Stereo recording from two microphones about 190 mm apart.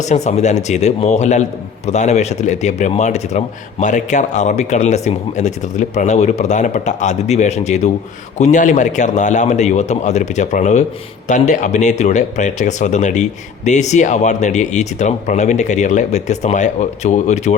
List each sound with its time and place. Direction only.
0.0 s speech: 35° left (ahead or behind)